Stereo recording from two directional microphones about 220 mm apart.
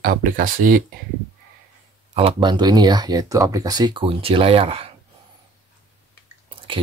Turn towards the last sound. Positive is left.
turn(degrees=-25)  # may be behind; listen again after turning